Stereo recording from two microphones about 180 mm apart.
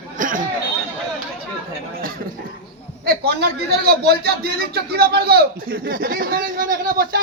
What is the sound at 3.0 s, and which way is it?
A man's voice, 60° right (ahead or behind).